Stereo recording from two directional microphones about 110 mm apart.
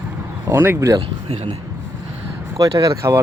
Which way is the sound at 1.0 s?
60° right (ahead or behind).